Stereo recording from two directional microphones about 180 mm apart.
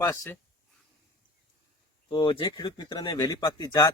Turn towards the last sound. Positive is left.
turn(degrees=20)  # may be behind; listen again after turning